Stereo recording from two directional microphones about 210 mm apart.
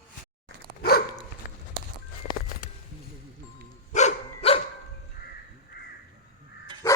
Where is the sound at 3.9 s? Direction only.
30° left (ahead or behind).